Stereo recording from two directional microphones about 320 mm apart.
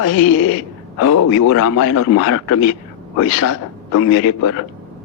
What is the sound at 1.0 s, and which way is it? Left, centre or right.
Speech, left.